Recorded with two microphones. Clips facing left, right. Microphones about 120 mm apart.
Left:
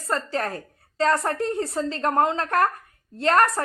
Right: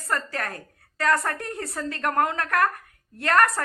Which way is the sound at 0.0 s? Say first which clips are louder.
Left 3 dB; 25° left (ahead or behind).